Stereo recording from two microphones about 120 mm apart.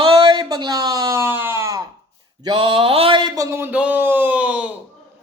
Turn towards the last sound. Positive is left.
turn(degrees=-10)  # may be behind; listen again after turning